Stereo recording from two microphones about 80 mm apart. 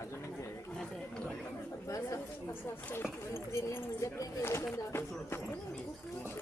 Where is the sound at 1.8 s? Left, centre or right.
Left.